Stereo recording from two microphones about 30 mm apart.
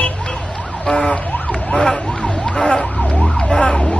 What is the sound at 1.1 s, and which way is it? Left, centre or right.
Emergency vehicle, left.